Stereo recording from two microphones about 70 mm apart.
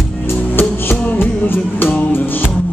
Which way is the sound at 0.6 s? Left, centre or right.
Left.